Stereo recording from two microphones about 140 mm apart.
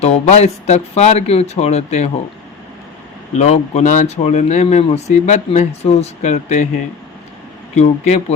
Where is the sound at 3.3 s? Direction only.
55° left (ahead or behind).